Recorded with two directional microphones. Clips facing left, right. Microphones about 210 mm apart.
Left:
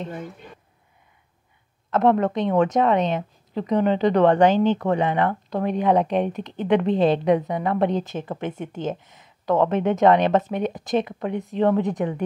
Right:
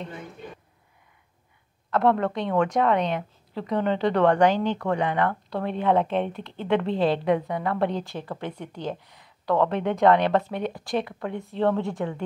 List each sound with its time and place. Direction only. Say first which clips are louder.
1.9 s a woman's voice: left 3 dB; 20° left (ahead or behind)